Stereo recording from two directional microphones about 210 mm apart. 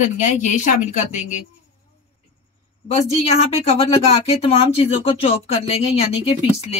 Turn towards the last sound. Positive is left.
turn(degrees=30)  # may be behind; listen again after turning